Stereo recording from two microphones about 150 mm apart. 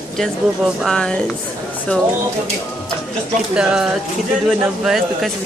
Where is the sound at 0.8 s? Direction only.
5° left (ahead or behind).